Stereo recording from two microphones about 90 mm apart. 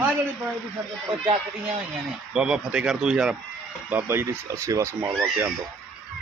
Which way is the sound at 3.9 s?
25° right (ahead or behind).